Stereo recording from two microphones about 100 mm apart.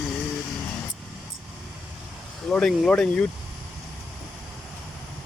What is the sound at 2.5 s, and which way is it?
Speech, 5° left (ahead or behind).